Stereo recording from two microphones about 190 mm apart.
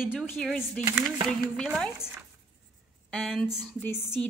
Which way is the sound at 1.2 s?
Centre (ahead or behind).